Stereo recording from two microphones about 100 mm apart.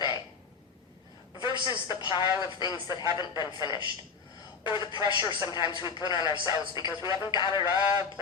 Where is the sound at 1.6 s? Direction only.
55° left (ahead or behind).